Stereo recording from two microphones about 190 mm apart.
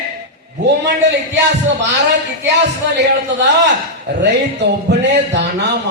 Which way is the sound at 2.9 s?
70° right (ahead or behind).